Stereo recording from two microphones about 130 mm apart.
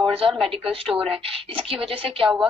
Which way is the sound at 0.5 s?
45° right (ahead or behind).